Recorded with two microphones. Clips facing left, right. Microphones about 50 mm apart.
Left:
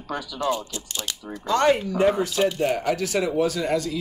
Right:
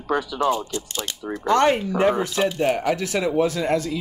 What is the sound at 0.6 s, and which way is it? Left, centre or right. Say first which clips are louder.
Speech: right 5 dB; right.